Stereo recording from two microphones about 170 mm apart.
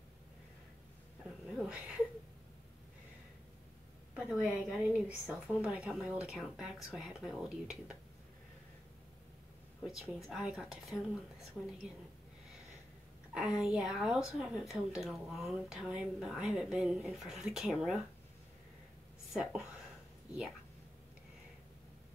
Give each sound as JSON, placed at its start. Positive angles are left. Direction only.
{"t": 1.6, "sound": "a sound", "side_deg": -5}
{"t": 4.1, "sound": "a woman's voice", "side_deg": -5}
{"t": 9.8, "sound": "a woman's voice", "side_deg": 0}
{"t": 13.3, "sound": "a woman's voice", "side_deg": -5}
{"t": 19.3, "sound": "a woman's voice", "side_deg": -5}